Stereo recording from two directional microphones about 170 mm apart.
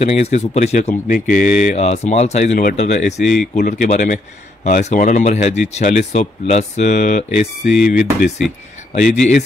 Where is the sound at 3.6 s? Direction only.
50° left (ahead or behind).